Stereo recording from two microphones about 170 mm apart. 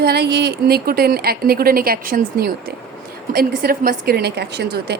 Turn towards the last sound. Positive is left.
turn(degrees=-75)  # may be behind; listen again after turning